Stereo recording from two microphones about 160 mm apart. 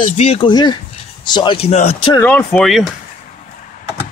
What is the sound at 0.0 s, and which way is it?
Speech, 40° left (ahead or behind).